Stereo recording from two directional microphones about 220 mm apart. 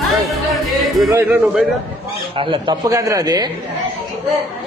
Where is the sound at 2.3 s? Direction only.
25° right (ahead or behind).